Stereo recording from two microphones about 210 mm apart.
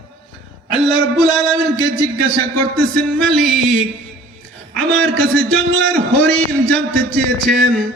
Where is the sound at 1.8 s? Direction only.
45° right (ahead or behind).